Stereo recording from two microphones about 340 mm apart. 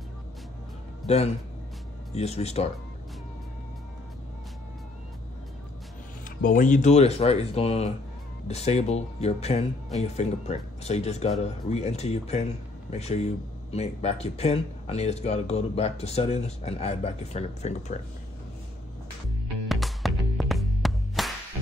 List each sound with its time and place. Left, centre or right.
1.0 s speech: centre
6.2 s speech: left
19.7 s music: centre